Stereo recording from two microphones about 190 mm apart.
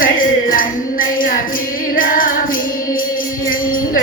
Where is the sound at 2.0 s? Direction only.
45° left (ahead or behind).